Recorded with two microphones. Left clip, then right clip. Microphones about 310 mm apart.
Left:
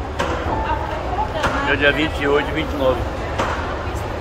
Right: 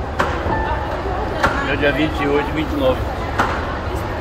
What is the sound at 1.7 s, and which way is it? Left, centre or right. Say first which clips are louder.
Speech: left 1 dB; centre.